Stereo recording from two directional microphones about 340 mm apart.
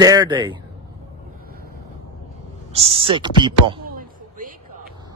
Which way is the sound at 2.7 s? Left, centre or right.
Centre.